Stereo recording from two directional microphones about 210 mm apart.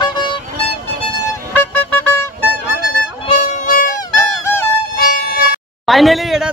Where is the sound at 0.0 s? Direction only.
20° left (ahead or behind).